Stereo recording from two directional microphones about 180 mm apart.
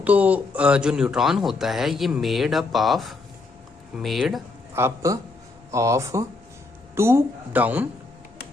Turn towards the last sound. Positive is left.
turn(degrees=-10)  # may be behind; listen again after turning